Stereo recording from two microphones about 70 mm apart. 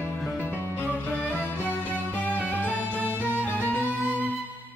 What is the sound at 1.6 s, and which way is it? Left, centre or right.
Music, left.